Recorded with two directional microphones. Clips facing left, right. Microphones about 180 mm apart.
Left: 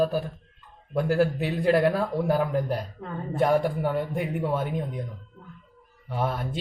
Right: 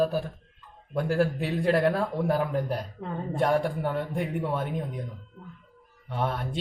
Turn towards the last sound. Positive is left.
turn(degrees=5)  # may be behind; listen again after turning